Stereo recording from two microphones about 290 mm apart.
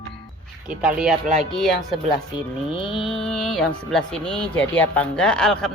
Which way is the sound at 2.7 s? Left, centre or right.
Centre.